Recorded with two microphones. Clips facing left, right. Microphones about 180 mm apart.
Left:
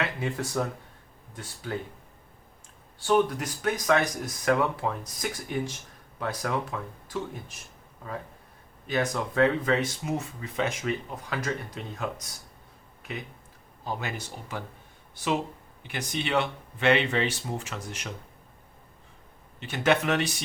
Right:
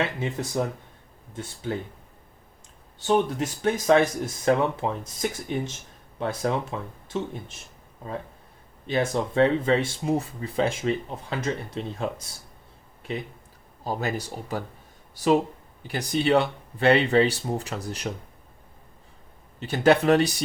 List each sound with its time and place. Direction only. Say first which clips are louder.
0.0 s speech: right 3 dB; 20° right (ahead or behind)
3.0 s speech: right 1 dB; 25° right (ahead or behind)
8.9 s speech: right 3 dB; 30° right (ahead or behind)
13.8 s speech: right 5 dB; 40° right (ahead or behind)
19.5 s speech: right 5 dB; 35° right (ahead or behind)